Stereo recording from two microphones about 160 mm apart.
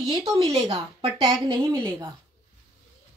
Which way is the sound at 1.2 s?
25° right (ahead or behind).